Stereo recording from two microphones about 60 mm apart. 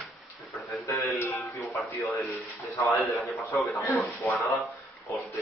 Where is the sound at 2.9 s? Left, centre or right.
Centre.